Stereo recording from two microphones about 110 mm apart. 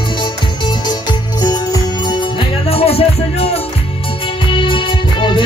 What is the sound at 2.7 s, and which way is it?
Music, 65° left (ahead or behind).